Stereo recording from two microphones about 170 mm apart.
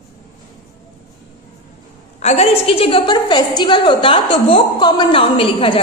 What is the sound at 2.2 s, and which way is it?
A woman's voice, 40° left (ahead or behind).